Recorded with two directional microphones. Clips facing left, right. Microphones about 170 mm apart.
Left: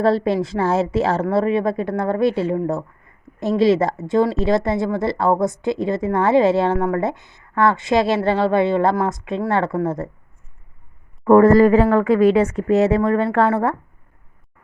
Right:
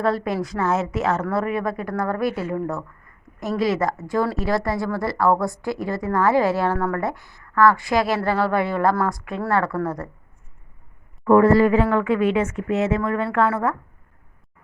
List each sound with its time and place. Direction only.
0.0 s speech: 30° left (ahead or behind)
11.3 s speech: 45° left (ahead or behind)